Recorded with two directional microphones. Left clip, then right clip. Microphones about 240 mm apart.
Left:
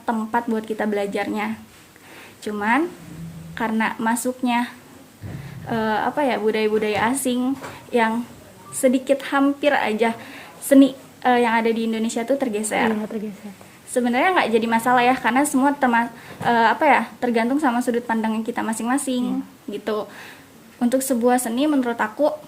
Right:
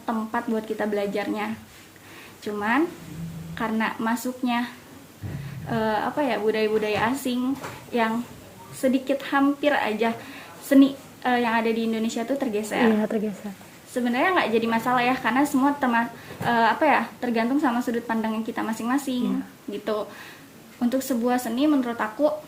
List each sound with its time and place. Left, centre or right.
0.0 s a woman's voice: left
13.0 s speech: right
13.9 s a woman's voice: left